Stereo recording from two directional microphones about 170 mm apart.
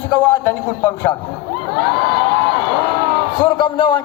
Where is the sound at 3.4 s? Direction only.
30° left (ahead or behind).